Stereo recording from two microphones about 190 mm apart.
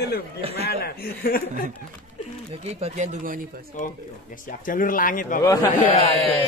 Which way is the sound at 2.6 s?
35° right (ahead or behind).